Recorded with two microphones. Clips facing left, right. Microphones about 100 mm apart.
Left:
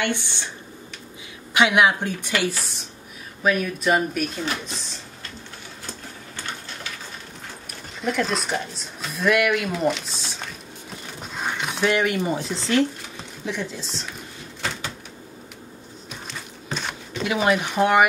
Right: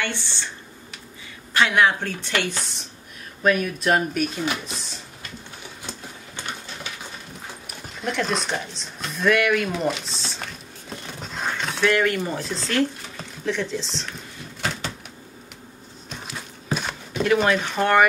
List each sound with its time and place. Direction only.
0.0 s speech: 15° left (ahead or behind)
1.5 s speech: 15° left (ahead or behind)
3.4 s speech: centre (ahead or behind)
5.9 s printer: 20° right (ahead or behind)
8.0 s speech: centre (ahead or behind)
11.3 s speech: 15° left (ahead or behind)
16.3 s a sound: 5° right (ahead or behind)
17.2 s speech: 10° left (ahead or behind)